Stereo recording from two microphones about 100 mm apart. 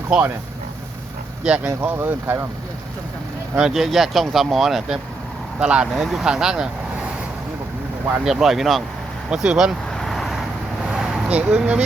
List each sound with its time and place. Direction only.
1.5 s speech: 15° right (ahead or behind)
3.5 s speech: 5° right (ahead or behind)
8.2 s speech: 5° right (ahead or behind)
10.0 s vehicle: centre (ahead or behind)